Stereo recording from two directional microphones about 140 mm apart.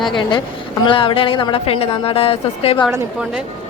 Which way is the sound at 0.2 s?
30° left (ahead or behind).